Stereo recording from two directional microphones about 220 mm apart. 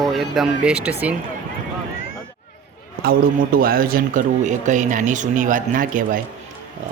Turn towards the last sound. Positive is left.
turn(degrees=-35)  # may be behind; listen again after turning